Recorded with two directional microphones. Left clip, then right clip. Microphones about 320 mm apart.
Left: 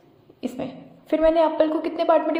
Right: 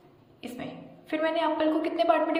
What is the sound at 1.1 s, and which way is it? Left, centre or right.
A woman's voice, centre.